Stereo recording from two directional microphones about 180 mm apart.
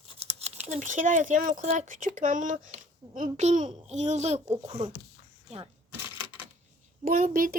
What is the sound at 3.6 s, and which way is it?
Speech, 25° right (ahead or behind).